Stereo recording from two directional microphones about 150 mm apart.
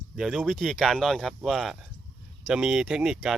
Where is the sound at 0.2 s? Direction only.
5° right (ahead or behind).